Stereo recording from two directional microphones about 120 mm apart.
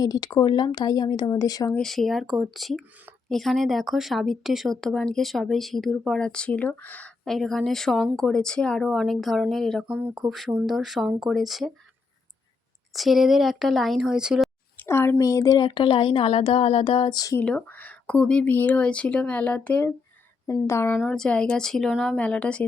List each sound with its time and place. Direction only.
0.0 s speech: 35° left (ahead or behind)
1.8 s speech: centre (ahead or behind)
12.9 s speech: centre (ahead or behind)
14.8 s speech: 20° left (ahead or behind); by 17.3 s 35° left (ahead or behind)
17.4 s a woman's voice: 10° left (ahead or behind)
20.5 s speech: 25° left (ahead or behind)
21.0 s speech: 5° left (ahead or behind)